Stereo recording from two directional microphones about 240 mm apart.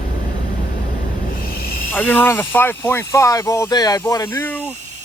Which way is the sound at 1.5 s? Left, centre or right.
Left.